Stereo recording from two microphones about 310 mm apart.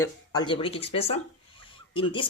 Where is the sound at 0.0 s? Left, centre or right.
Centre.